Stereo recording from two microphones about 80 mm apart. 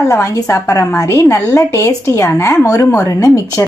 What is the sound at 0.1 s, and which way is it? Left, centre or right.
A woman's voice, left.